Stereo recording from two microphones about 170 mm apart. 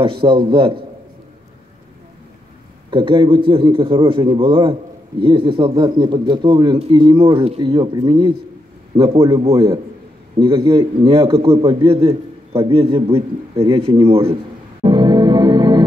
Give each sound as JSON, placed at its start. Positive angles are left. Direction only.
{"t": 0.0, "sound": "a man's voice", "side_deg": -30}
{"t": 2.9, "sound": "a man's voice", "side_deg": -30}
{"t": 9.5, "sound": "a man's voice", "side_deg": -20}
{"t": 14.8, "sound": "music", "side_deg": -30}